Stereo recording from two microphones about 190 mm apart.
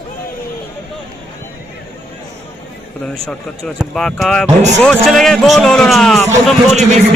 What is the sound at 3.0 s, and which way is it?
Speech, 5° left (ahead or behind).